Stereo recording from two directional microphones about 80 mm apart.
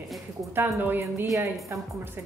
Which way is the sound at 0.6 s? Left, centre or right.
Right.